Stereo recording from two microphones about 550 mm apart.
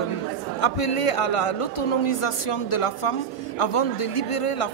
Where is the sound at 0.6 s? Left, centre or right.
Left.